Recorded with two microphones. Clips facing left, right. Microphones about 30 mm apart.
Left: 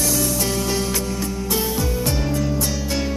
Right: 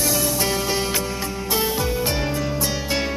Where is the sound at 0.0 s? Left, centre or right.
Centre.